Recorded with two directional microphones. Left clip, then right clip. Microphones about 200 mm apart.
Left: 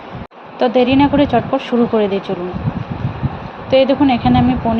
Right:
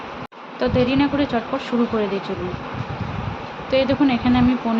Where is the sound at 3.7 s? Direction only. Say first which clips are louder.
Left 6 dB; 15° left (ahead or behind).